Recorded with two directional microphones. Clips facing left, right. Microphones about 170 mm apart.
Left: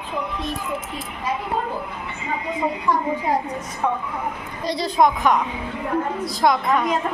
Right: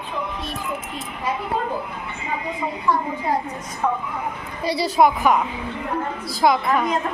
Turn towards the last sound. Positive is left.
turn(degrees=0)  # may be behind; listen again after turning